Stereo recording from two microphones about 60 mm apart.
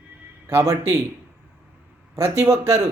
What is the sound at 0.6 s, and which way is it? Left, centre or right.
Speech, right.